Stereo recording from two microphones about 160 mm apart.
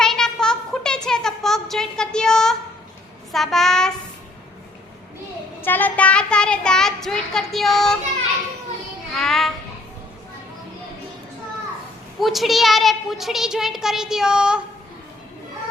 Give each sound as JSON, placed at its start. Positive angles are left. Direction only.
{"t": 0.0, "sound": "a sound", "side_deg": 5}
{"t": 3.3, "sound": "child singing", "side_deg": 0}
{"t": 5.6, "sound": "child singing", "side_deg": 10}
{"t": 9.1, "sound": "child singing", "side_deg": 0}
{"t": 12.2, "sound": "a woman's voice", "side_deg": 0}